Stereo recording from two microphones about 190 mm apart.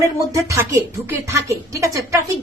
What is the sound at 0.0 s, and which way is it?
Speech, 15° right (ahead or behind).